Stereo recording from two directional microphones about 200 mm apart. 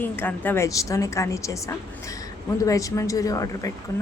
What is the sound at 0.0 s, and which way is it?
A woman's voice, 10° left (ahead or behind).